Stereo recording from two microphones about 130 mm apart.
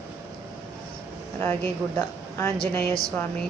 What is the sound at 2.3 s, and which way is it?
Music, 15° left (ahead or behind).